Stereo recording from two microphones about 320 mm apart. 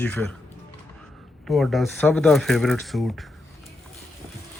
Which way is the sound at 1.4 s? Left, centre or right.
Centre.